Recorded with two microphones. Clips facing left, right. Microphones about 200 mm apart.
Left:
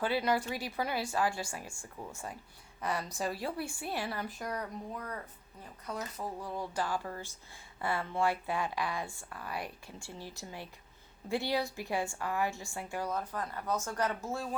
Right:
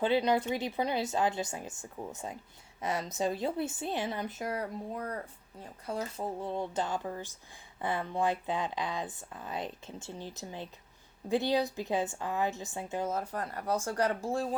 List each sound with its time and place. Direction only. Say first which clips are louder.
0.0 s speech: right 4 dB; 20° right (ahead or behind)